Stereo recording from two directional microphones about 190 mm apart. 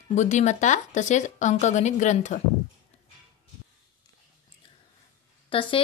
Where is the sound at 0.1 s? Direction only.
40° left (ahead or behind).